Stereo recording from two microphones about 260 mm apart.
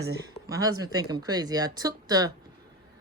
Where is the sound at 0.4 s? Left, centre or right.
Centre.